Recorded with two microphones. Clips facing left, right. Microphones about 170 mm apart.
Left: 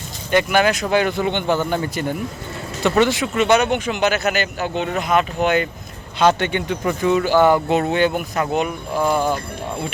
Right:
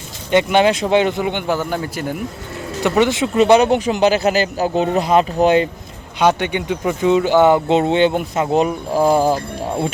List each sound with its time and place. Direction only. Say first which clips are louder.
0.3 s speech: right 3 dB; 25° right (ahead or behind)
1.2 s a man's voice: even; 10° right (ahead or behind)
2.8 s a man's voice: right 1 dB; 15° right (ahead or behind)
3.3 s speech: right 6 dB; 35° right (ahead or behind)
6.1 s speech: right 1 dB; 15° right (ahead or behind); by 9.4 s 35° right (ahead or behind)